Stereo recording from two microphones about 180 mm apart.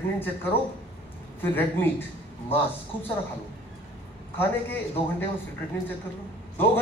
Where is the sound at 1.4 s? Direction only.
10° left (ahead or behind).